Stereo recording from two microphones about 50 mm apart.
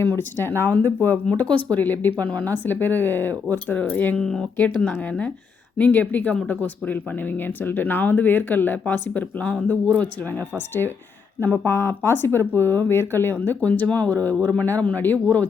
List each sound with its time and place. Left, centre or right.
0.0 s speech: left
1.5 s speech: left
1.8 s speech: left
5.7 s speech: left
11.3 s speech: left
13.3 s speech: left